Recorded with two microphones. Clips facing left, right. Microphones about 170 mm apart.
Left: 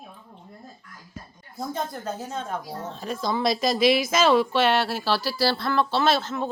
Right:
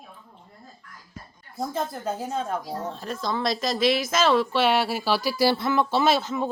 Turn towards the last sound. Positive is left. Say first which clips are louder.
# right 1 dB
turn(degrees=-15)  # may be behind; listen again after turning